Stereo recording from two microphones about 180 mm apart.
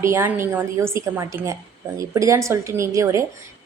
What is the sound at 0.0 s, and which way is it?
A woman's voice, 15° right (ahead or behind).